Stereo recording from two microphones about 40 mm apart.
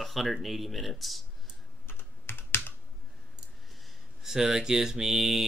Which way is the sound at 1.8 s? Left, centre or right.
Left.